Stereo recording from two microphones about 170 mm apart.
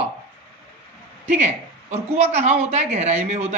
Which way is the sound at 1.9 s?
40° right (ahead or behind).